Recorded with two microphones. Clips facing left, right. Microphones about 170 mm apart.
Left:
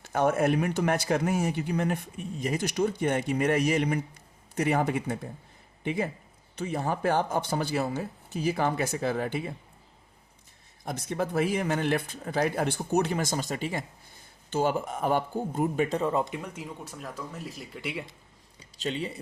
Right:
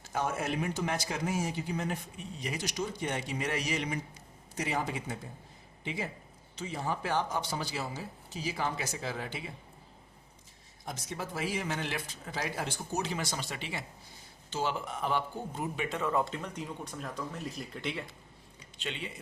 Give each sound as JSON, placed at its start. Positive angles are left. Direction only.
{"t": 0.0, "sound": "speech", "side_deg": 60}
{"t": 10.8, "sound": "speech", "side_deg": 55}
{"t": 16.2, "sound": "speech", "side_deg": 10}
{"t": 18.8, "sound": "speech", "side_deg": 40}